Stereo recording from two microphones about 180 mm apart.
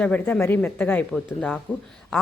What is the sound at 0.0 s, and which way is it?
A woman's voice, 10° left (ahead or behind).